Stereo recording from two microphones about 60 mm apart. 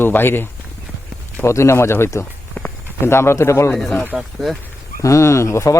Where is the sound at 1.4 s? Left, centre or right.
Left.